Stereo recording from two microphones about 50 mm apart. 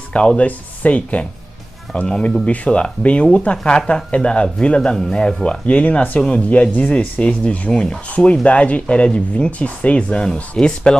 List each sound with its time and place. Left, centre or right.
0.4 s speech: left
6.7 s speech: left; by 11.0 s centre